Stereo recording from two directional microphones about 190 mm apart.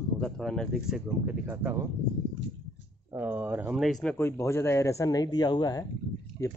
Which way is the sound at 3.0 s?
10° right (ahead or behind).